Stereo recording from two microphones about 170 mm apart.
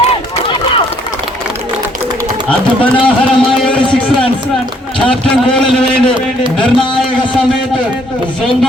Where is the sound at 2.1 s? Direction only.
25° right (ahead or behind).